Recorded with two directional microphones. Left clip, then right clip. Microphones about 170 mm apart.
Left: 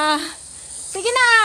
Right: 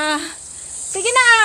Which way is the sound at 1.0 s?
30° left (ahead or behind).